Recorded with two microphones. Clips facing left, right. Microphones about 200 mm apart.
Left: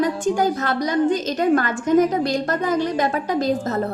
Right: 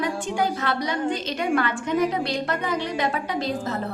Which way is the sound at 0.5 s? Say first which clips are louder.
Left 5 dB; 45° left (ahead or behind).